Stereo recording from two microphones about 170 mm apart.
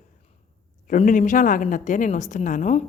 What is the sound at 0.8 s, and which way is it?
A woman's voice, 50° left (ahead or behind).